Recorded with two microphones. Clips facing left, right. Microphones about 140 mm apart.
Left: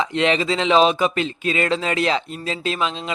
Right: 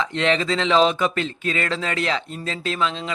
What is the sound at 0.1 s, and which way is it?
Speech, 15° left (ahead or behind).